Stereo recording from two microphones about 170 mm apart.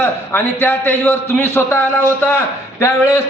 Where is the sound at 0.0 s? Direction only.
10° left (ahead or behind).